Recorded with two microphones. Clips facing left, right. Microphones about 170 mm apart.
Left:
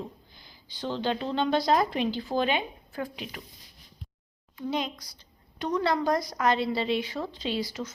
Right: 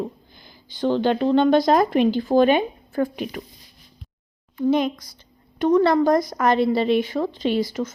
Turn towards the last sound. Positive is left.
turn(degrees=-50)  # may be behind; listen again after turning